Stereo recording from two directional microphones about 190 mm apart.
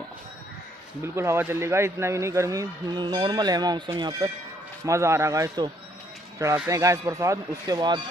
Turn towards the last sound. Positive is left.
turn(degrees=-20)  # may be behind; listen again after turning